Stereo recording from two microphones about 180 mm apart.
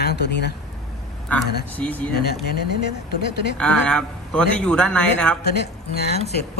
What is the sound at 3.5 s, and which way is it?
A man's voice, 5° left (ahead or behind).